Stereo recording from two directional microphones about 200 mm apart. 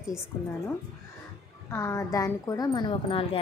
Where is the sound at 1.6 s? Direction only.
15° left (ahead or behind).